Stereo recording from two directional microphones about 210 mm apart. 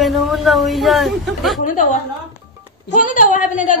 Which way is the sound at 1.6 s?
40° left (ahead or behind).